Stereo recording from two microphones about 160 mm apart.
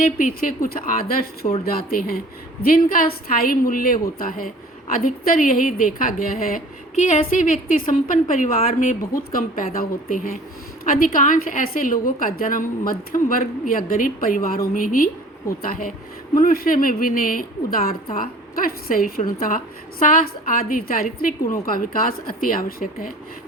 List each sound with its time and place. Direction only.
0.0 s a woman's voice: 60° left (ahead or behind)